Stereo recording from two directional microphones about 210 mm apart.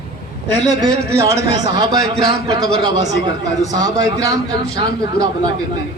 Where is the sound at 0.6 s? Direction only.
15° right (ahead or behind).